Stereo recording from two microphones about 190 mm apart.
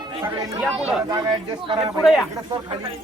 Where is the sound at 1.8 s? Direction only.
Centre (ahead or behind).